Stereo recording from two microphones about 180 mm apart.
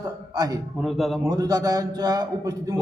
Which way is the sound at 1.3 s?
20° right (ahead or behind).